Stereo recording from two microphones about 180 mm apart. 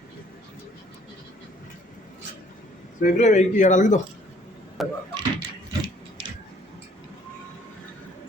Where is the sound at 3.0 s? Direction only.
45° left (ahead or behind).